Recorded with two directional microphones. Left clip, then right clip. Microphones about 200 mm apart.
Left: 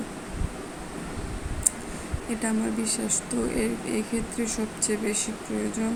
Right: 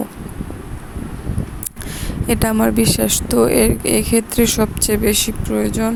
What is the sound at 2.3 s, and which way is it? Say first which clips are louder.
Speech: right 13 dB; 50° right (ahead or behind).